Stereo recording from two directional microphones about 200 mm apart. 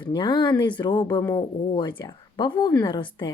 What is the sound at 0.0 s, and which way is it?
Speech, 25° left (ahead or behind).